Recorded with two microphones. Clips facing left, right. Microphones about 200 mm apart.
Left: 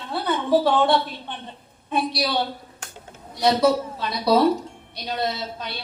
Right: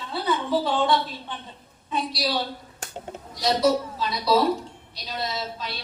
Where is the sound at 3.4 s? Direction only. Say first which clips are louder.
Left 3 dB; 60° left (ahead or behind).